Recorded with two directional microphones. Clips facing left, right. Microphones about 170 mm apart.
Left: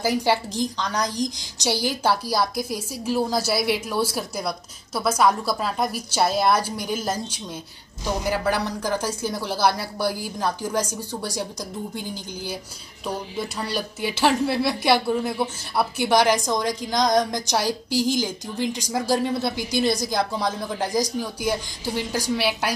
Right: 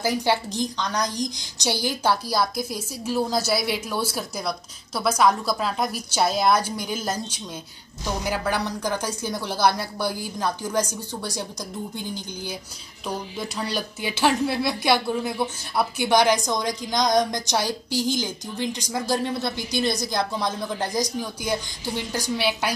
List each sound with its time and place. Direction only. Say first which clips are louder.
0.0 s speech: left 1 dB; 5° left (ahead or behind)
13.6 s speech: even; 5° left (ahead or behind)